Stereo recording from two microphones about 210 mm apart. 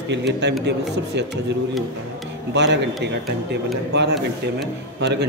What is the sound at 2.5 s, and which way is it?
A man's voice, 55° right (ahead or behind).